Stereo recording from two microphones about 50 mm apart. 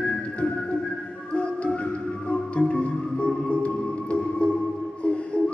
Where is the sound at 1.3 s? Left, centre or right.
Left.